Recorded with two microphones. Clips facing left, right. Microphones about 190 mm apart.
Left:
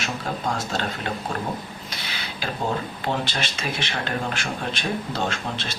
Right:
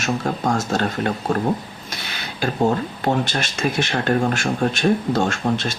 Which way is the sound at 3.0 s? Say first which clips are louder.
Right 7 dB; 45° right (ahead or behind).